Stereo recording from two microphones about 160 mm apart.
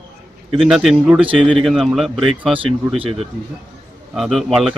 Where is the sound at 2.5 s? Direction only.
35° right (ahead or behind).